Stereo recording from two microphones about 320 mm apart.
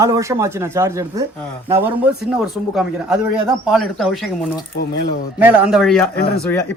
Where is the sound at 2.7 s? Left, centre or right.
Centre.